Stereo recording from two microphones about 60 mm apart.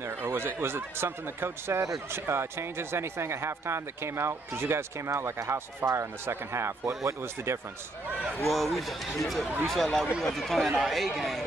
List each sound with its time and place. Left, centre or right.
0.0 s speech: right
8.5 s speech: centre